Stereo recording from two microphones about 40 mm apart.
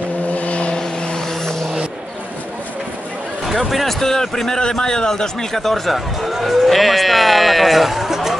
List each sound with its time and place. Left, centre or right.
0.3 s vehicle: left
0.7 s vehicle: centre
3.4 s a man's voice: centre